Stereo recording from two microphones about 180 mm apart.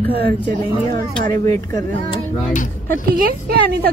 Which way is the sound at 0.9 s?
20° left (ahead or behind).